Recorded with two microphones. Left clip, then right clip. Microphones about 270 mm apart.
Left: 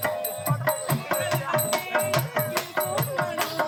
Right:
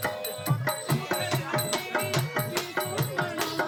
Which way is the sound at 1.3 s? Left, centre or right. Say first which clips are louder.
Left 4 dB; centre.